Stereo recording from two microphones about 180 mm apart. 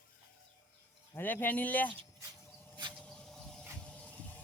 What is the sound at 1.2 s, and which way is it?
Speech, 10° left (ahead or behind).